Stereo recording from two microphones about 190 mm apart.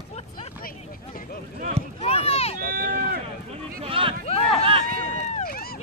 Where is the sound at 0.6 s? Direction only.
50° left (ahead or behind).